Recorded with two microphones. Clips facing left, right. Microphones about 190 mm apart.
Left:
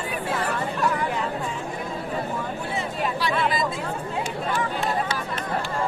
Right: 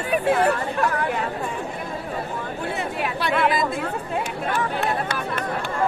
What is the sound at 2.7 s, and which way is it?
Chatter, 60° right (ahead or behind).